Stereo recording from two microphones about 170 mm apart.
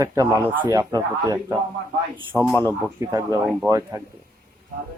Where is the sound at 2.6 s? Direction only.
20° right (ahead or behind).